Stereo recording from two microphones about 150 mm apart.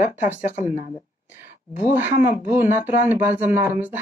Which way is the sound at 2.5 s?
15° right (ahead or behind).